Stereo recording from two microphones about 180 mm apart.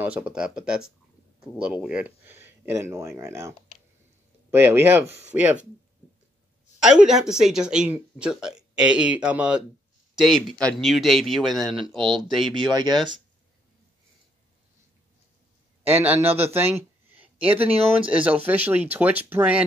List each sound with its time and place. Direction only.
0.0 s speech: 10° right (ahead or behind)
6.8 s speech: 5° right (ahead or behind)
12.5 s speech: 25° right (ahead or behind)
15.9 s speech: 10° right (ahead or behind)
18.0 s speech: 5° right (ahead or behind)